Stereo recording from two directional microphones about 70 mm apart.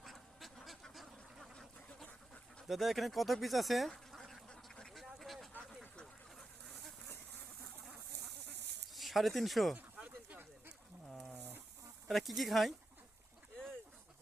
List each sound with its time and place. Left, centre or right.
0.0 s duck: centre
2.0 s dog: centre
2.6 s speech: centre
4.2 s duck: centre
5.0 s a sound: centre
9.0 s speech: centre
10.0 s a sound: right
12.0 s speech: centre